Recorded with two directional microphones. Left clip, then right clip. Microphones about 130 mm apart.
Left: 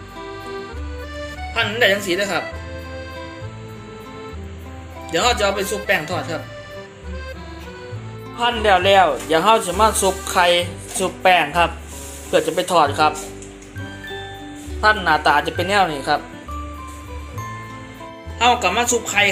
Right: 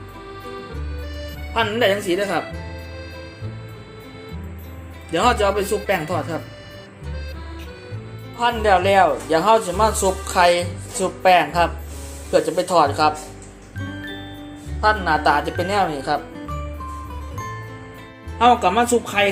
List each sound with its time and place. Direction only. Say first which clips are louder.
0.3 s accordion: left 3 dB; centre (ahead or behind)
1.5 s speech: left 1 dB; 75° right (ahead or behind)
5.1 s speech: even; 75° right (ahead or behind)
5.9 s speech: left 1 dB; 85° right
8.4 s speech: left 1 dB; 5° right (ahead or behind)
14.8 s speech: left 2 dB; 5° right (ahead or behind)
18.3 s speech: right 1 dB; 70° right (ahead or behind)